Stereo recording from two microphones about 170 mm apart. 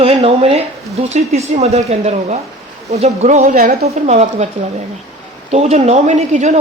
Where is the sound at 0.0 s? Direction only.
35° right (ahead or behind); by 3.8 s 60° right (ahead or behind).